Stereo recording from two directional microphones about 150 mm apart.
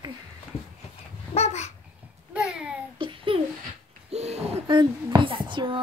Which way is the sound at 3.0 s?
35° right (ahead or behind).